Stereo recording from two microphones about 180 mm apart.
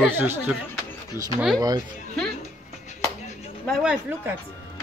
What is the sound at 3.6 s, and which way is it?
Speech, 5° right (ahead or behind).